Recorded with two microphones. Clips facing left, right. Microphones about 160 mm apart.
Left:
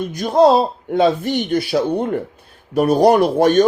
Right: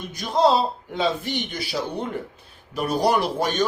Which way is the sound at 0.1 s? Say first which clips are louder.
Left 6 dB; 50° left (ahead or behind).